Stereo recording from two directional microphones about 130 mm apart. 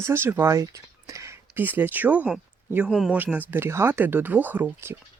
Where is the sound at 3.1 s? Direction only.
15° right (ahead or behind).